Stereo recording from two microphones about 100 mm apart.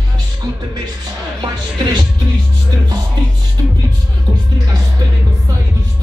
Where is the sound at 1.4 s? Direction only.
45° right (ahead or behind).